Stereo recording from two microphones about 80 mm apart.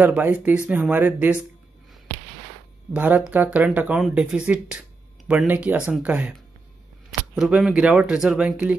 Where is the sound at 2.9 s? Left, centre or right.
Centre.